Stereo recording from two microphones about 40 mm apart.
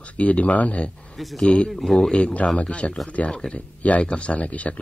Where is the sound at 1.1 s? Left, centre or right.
Centre.